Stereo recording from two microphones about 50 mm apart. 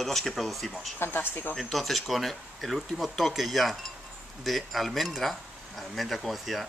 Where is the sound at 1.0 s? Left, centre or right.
Left.